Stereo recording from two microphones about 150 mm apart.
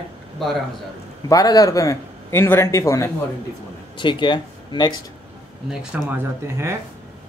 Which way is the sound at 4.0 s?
30° left (ahead or behind).